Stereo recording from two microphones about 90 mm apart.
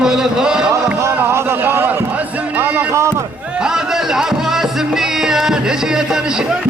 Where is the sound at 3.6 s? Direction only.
5° right (ahead or behind).